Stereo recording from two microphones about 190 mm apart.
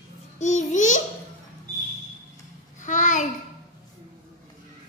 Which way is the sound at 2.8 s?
40° left (ahead or behind).